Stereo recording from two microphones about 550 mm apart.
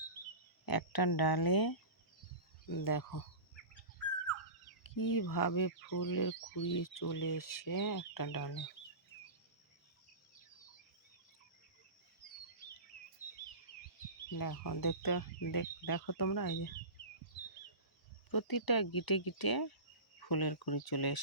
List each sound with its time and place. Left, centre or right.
0.6 s speech: left
4.8 s speech: left
14.3 s speech: left
18.3 s speech: left